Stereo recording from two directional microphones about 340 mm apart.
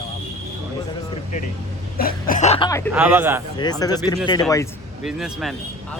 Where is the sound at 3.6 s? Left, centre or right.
Centre.